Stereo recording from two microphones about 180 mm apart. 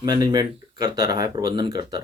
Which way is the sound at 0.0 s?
25° right (ahead or behind).